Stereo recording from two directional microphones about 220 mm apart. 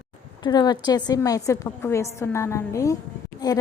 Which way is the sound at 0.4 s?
20° left (ahead or behind).